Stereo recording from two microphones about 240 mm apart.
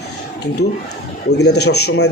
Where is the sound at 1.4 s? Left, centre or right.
Left.